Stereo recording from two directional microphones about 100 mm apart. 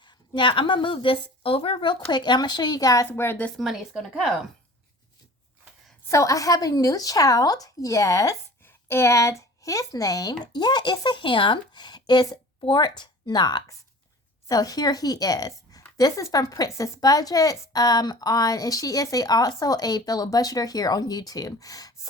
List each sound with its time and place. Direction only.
0.3 s a woman's voice: 55° left (ahead or behind); by 3.1 s 35° left (ahead or behind)
3.1 s a woman's voice: 20° left (ahead or behind)
3.6 s speech: 5° right (ahead or behind)
6.1 s a woman's voice: 35° left (ahead or behind)
8.6 s a woman's voice: 25° left (ahead or behind)